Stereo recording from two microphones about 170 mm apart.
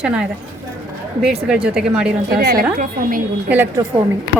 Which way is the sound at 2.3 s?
70° right (ahead or behind).